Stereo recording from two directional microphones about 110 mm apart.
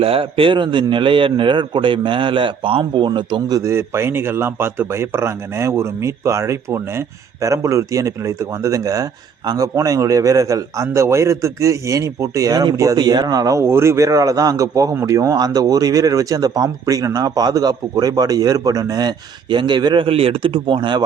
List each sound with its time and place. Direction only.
0.0 s a man's voice: 60° right (ahead or behind)
3.6 s a man's voice: 25° right (ahead or behind); by 21.0 s 45° right (ahead or behind)